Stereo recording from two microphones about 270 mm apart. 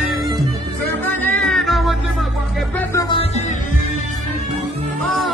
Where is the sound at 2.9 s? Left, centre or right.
Centre.